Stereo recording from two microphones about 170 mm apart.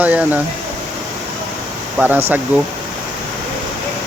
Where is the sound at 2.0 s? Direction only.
10° right (ahead or behind).